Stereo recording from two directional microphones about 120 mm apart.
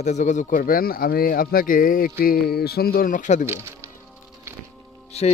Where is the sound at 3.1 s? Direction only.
90° left.